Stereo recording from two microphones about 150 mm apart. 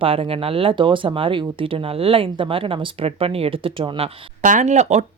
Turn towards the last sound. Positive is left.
turn(degrees=-50)  # may be behind; listen again after turning